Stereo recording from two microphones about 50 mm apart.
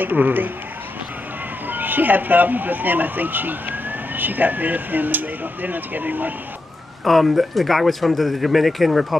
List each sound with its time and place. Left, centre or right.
0.0 s speech: right
1.7 s speech: right
7.1 s speech: centre